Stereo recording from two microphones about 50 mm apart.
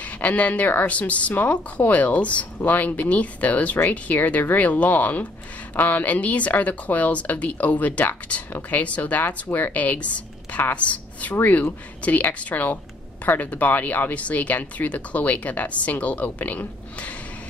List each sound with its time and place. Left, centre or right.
0.2 s a woman's voice: left